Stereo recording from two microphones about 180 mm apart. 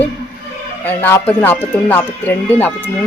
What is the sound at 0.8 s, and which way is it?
Speech, 10° left (ahead or behind).